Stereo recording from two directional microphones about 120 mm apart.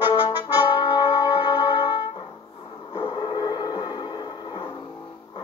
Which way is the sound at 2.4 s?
35° left (ahead or behind).